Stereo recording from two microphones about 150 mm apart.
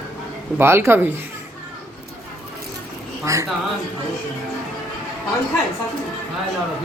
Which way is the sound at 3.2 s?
20° right (ahead or behind).